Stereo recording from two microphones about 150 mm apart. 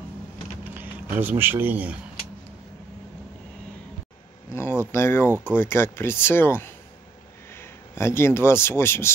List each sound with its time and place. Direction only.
0.7 s a sound: 15° right (ahead or behind)
1.4 s speech: 15° right (ahead or behind)
4.5 s speech: 15° left (ahead or behind)